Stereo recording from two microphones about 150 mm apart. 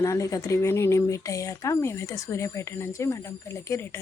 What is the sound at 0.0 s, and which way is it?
Speech, 20° left (ahead or behind).